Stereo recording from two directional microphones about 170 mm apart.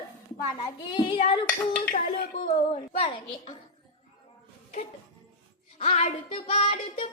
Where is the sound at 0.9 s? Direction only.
30° left (ahead or behind).